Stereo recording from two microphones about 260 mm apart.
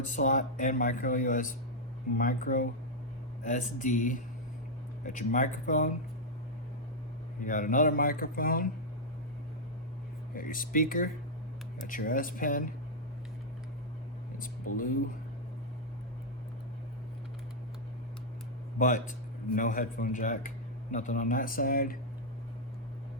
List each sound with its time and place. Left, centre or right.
0.0 s speech: left
7.4 s speech: left
10.3 s speech: left
14.7 s speech: left
18.8 s speech: left